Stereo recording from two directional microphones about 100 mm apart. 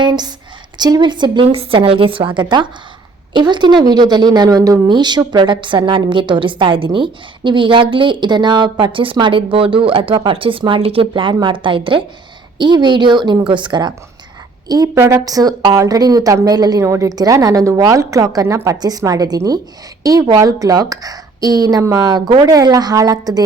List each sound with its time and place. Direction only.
0.0 s a woman's voice: 45° right (ahead or behind)
1.5 s a woman's voice: 70° right (ahead or behind); by 4.8 s 35° right (ahead or behind)
4.9 s a woman's voice: 45° right (ahead or behind)
14.7 s a woman's voice: 35° right (ahead or behind)